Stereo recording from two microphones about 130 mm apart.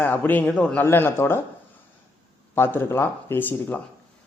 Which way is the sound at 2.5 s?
20° left (ahead or behind).